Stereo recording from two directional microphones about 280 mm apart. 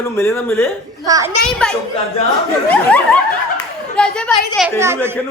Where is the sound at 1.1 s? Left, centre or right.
Centre.